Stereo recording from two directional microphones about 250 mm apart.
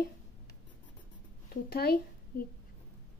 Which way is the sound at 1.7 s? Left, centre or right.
Left.